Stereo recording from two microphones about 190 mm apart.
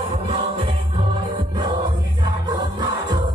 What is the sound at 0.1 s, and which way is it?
Music, 30° right (ahead or behind).